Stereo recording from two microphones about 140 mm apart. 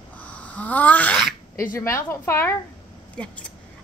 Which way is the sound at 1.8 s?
20° left (ahead or behind).